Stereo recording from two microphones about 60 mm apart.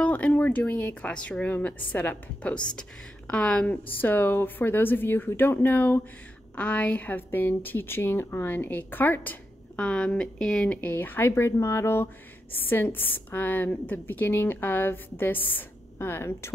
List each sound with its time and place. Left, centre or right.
0.0 s a woman's voice: left
9.8 s speech: centre
10.8 s a woman's voice: left